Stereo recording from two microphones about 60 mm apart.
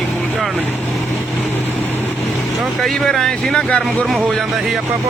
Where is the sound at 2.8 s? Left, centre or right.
Centre.